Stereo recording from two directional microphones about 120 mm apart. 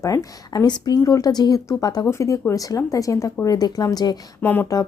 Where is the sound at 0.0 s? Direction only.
30° left (ahead or behind).